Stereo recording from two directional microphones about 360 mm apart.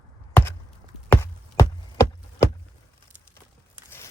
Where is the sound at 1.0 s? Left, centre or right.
Centre.